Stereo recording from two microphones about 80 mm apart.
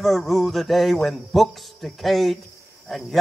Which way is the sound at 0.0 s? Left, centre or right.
Centre.